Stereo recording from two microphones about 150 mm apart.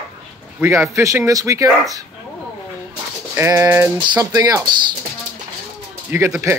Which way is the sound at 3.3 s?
15° right (ahead or behind).